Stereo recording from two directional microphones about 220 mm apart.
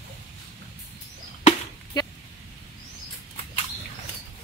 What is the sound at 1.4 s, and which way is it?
Chop, 20° left (ahead or behind).